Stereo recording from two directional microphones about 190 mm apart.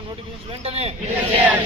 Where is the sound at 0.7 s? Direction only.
35° right (ahead or behind).